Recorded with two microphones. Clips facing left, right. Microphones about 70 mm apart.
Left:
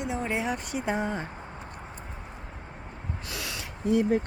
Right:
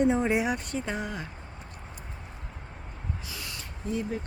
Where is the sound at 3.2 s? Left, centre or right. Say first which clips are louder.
Left 4 dB; left.